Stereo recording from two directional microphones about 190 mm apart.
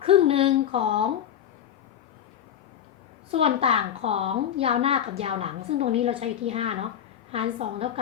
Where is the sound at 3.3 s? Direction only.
30° right (ahead or behind).